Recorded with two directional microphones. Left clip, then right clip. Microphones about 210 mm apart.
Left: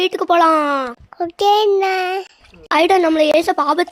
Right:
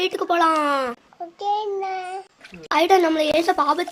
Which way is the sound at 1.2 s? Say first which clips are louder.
Left 11 dB; 55° left (ahead or behind).